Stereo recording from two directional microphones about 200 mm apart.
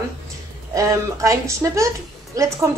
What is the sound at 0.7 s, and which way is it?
A woman's voice, 15° right (ahead or behind).